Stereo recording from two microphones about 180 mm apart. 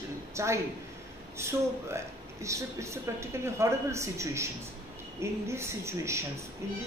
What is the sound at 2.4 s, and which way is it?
A man's voice, 15° right (ahead or behind).